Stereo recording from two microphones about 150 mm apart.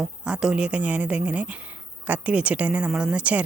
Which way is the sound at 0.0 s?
5° right (ahead or behind).